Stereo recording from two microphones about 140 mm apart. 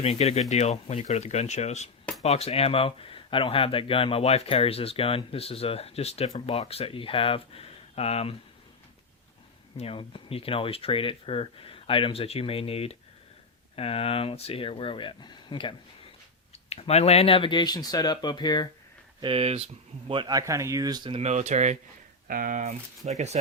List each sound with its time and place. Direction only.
0.0 s speech: 50° left (ahead or behind)
9.7 s speech: 45° left (ahead or behind)
16.6 s speech: 45° left (ahead or behind); by 18.7 s 30° left (ahead or behind)
19.2 s speech: 40° right (ahead or behind)
21.1 s speech: 50° right (ahead or behind)
22.3 s speech: 85° right; by 23.4 s 55° right (ahead or behind)